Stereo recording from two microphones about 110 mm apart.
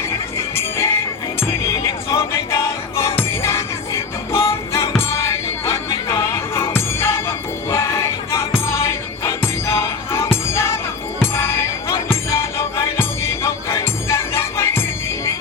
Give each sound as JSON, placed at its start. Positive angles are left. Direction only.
{"t": 0.3, "sound": "music", "side_deg": 25}